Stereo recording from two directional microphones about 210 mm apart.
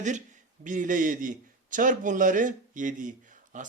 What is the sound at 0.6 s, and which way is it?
A man's voice, 40° right (ahead or behind).